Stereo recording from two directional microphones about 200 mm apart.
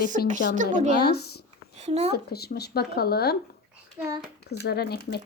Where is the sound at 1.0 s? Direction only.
50° left (ahead or behind).